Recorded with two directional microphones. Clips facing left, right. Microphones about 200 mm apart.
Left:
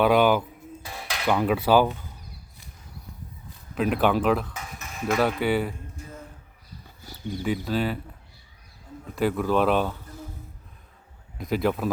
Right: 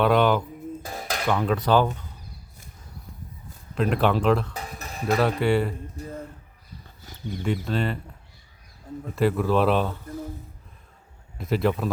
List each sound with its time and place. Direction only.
0.0 s speech: 5° left (ahead or behind)
0.8 s cutlery: 45° right (ahead or behind)
1.3 s speech: 5° left (ahead or behind)
3.8 s speech: 5° left (ahead or behind)
4.5 s a sound: 35° right (ahead or behind)
5.4 s speech: centre (ahead or behind)
7.4 s speech: 5° left (ahead or behind)
9.1 s speech: centre (ahead or behind)
11.3 s speech: centre (ahead or behind)